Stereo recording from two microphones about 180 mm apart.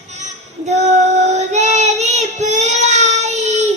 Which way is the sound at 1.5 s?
40° right (ahead or behind).